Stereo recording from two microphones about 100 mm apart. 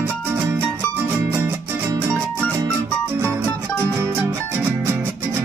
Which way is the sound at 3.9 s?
25° right (ahead or behind).